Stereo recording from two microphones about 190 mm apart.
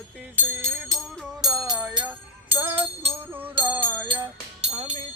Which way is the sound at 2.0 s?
10° right (ahead or behind).